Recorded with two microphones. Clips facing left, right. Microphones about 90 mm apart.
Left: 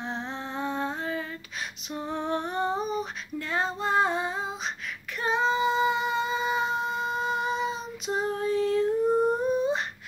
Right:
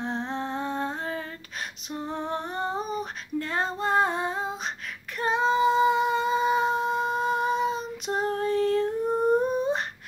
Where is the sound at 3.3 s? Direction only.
45° right (ahead or behind).